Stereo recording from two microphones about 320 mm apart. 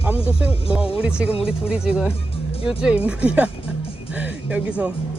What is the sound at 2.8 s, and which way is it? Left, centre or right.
Speech, centre.